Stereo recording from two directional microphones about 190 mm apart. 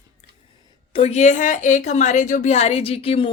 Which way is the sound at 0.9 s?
30° left (ahead or behind).